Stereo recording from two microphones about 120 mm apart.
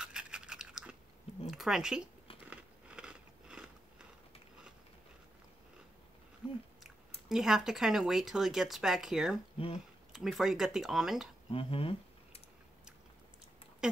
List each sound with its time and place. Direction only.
0.0 s toothbrush: 5° right (ahead or behind)
1.4 s a sound: centre (ahead or behind)
2.5 s biting: 10° right (ahead or behind)
6.4 s chewing: 10° right (ahead or behind)
6.8 s speech: 5° right (ahead or behind)
11.5 s speech: 50° left (ahead or behind)